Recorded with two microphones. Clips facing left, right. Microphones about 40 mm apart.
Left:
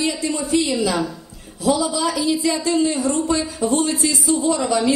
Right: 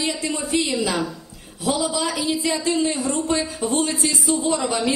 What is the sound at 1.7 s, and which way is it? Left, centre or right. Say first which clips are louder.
A woman's voice: left 3 dB; right.